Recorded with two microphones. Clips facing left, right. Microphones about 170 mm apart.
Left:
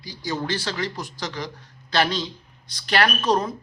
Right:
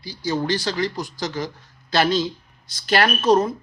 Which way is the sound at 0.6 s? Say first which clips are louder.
Right 4 dB; 40° right (ahead or behind).